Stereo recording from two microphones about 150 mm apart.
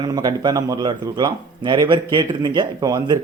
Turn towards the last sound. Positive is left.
turn(degrees=-25)  # may be behind; listen again after turning